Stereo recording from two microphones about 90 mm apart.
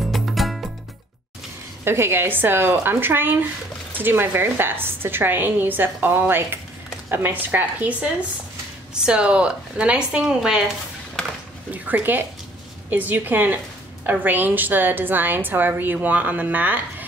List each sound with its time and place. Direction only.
0.1 s music: centre (ahead or behind)
1.9 s a woman's voice: 25° right (ahead or behind); by 10.6 s 5° right (ahead or behind)
11.7 s a woman's voice: 20° right (ahead or behind)